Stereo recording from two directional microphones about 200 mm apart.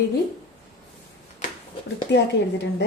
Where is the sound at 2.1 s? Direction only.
60° left (ahead or behind).